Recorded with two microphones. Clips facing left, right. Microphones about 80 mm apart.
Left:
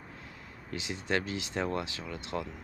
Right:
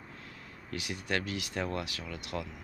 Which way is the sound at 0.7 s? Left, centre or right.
Left.